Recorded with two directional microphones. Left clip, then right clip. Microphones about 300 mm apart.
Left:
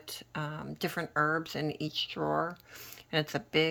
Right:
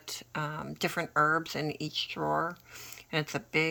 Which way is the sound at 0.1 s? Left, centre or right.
Centre.